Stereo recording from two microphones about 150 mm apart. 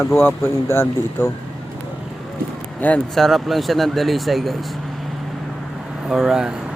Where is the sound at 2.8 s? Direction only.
5° left (ahead or behind).